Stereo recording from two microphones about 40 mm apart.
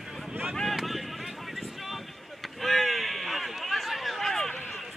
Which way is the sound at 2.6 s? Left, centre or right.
Centre.